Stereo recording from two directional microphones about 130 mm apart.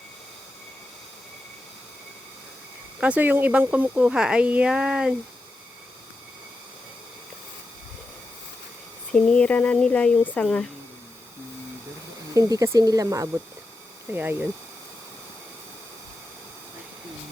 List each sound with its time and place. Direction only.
3.0 s speech: 10° right (ahead or behind)
9.1 s speech: 10° left (ahead or behind)
12.3 s speech: 25° right (ahead or behind)
14.1 s speech: 15° right (ahead or behind)